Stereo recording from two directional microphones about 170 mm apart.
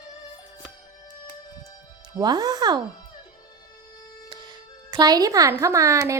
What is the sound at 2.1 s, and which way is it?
Speech, 20° right (ahead or behind).